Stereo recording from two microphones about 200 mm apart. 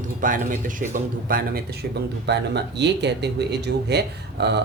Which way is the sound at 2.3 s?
60° right (ahead or behind).